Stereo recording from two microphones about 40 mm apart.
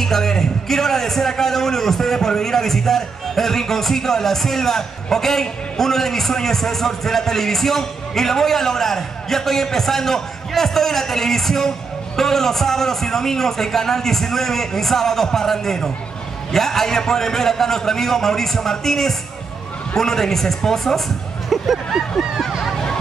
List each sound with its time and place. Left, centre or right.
0.0 s a man's voice: centre
21.5 s speech: centre
22.7 s a sound: centre